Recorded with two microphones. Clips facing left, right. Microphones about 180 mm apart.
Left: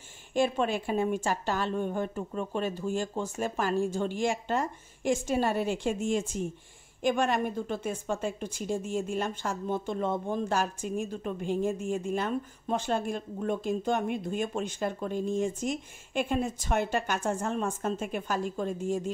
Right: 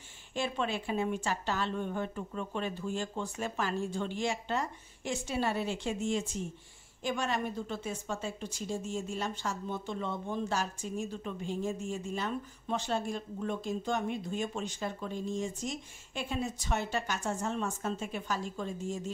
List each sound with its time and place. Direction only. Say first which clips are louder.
0.3 s a woman's voice: left 7 dB; 50° left (ahead or behind)